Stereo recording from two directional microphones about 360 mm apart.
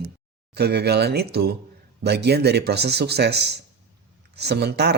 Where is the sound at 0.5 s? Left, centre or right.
Right.